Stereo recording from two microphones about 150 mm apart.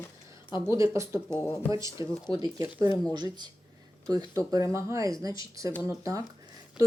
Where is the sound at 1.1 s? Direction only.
25° left (ahead or behind).